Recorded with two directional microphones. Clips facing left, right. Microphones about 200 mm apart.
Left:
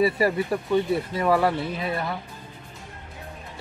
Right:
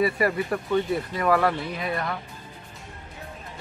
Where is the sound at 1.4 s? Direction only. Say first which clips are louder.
Left 1 dB; 25° left (ahead or behind).